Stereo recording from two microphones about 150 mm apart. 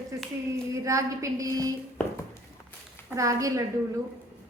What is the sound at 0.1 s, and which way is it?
A woman's voice, 20° right (ahead or behind).